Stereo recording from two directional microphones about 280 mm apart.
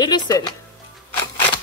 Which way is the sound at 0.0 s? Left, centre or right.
Centre.